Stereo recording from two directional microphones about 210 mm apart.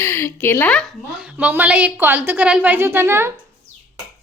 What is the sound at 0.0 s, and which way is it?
A woman's voice, 10° left (ahead or behind).